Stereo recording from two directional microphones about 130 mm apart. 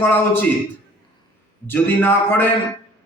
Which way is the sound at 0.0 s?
15° left (ahead or behind).